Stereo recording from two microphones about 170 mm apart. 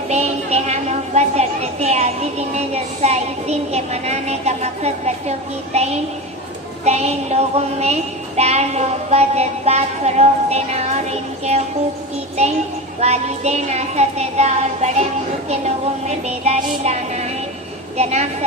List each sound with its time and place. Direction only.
0.1 s child singing: 40° right (ahead or behind)
13.0 s child singing: 40° right (ahead or behind)